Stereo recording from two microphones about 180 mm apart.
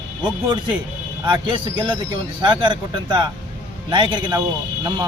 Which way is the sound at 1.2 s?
25° right (ahead or behind).